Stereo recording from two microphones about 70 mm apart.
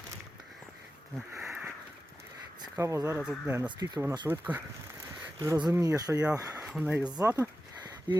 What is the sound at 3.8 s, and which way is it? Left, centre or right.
Speech, right.